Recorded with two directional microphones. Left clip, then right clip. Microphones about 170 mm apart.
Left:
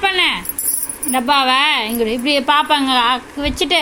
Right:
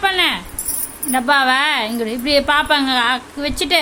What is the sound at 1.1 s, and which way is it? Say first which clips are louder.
A woman's voice: even; 5° right (ahead or behind).